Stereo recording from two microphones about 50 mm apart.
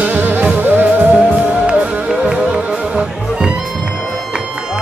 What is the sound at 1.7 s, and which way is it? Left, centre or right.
Music, right.